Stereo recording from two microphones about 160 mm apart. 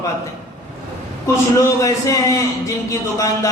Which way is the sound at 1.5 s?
20° left (ahead or behind).